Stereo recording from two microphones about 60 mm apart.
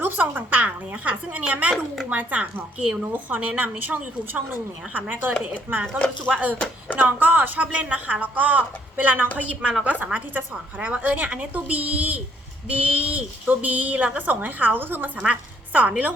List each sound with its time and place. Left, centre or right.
0.0 s a woman's voice: right
9.4 s a woman's voice: centre; by 15.1 s right
15.2 s a woman's voice: right